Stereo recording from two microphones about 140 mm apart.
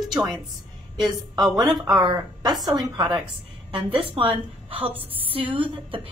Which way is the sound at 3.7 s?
40° right (ahead or behind).